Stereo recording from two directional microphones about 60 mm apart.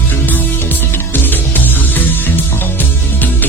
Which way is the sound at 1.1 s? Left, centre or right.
Left.